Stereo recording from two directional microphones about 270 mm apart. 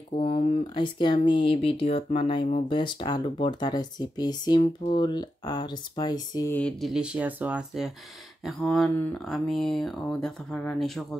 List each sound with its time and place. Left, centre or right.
0.1 s speech: centre